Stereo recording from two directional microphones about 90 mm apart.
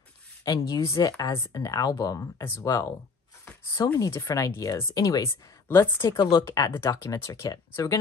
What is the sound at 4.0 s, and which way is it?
Speech, 40° left (ahead or behind).